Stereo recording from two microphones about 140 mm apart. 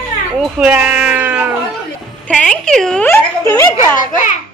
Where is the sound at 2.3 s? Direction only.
5° left (ahead or behind).